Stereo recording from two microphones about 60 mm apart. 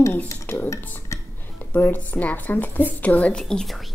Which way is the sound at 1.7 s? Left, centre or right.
Left.